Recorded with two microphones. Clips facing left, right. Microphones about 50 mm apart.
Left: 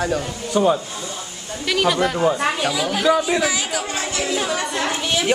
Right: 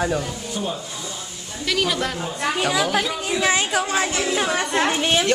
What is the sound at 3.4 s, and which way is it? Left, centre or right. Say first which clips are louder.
Speech: right 2 dB; right.